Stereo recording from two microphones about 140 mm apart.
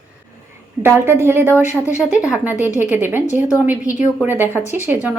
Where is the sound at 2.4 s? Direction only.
10° right (ahead or behind).